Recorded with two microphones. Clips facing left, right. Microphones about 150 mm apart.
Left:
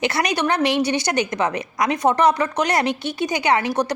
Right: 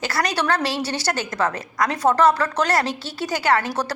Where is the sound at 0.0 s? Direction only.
20° left (ahead or behind).